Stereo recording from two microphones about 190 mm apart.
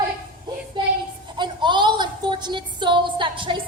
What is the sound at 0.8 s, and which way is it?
A woman's voice, 25° right (ahead or behind).